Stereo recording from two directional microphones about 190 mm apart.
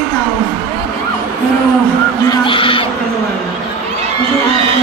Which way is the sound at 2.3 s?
25° left (ahead or behind).